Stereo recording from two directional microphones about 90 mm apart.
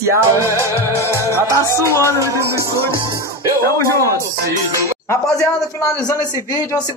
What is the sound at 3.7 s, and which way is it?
Speech, 35° left (ahead or behind).